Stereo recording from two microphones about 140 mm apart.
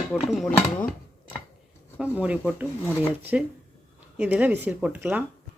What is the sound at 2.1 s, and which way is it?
Speech, 10° right (ahead or behind).